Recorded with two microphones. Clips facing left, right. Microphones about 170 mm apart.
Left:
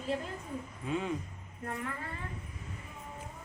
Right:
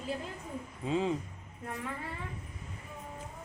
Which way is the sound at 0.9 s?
30° right (ahead or behind).